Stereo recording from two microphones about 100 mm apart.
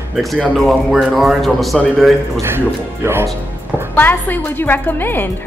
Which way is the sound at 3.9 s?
20° left (ahead or behind).